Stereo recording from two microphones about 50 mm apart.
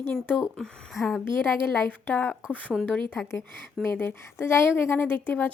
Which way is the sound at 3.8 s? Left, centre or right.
Left.